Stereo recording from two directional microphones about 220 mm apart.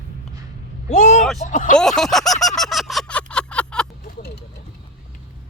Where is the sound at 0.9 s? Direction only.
35° left (ahead or behind).